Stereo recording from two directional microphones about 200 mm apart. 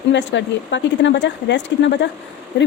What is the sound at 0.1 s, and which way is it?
A woman's voice, 60° left (ahead or behind).